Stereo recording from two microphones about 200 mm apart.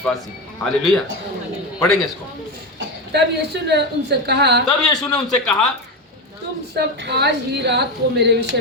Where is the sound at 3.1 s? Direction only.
55° right (ahead or behind).